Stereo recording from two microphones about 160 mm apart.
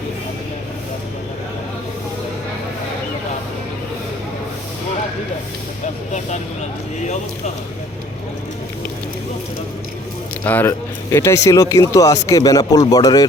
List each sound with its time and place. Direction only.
6.1 s speech: 45° left (ahead or behind)
10.4 s speech: 10° left (ahead or behind)